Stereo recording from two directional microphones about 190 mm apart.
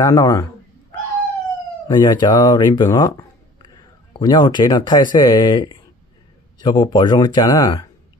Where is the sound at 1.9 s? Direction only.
20° left (ahead or behind).